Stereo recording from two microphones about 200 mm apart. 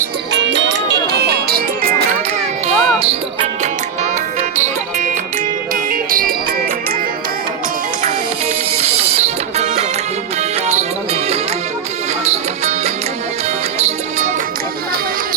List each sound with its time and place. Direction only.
0.3 s music: 65° right (ahead or behind)
2.6 s music: 30° right (ahead or behind)
8.8 s music: 30° right (ahead or behind)